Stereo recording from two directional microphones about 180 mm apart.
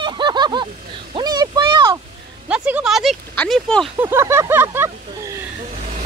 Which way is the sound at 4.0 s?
15° right (ahead or behind).